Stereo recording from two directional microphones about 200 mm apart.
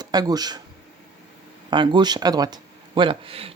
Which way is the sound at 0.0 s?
20° right (ahead or behind).